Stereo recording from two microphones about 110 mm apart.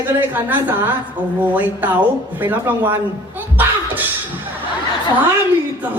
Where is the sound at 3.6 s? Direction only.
15° right (ahead or behind).